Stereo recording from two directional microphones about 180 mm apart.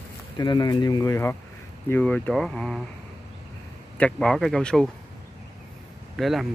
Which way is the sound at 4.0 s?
5° left (ahead or behind).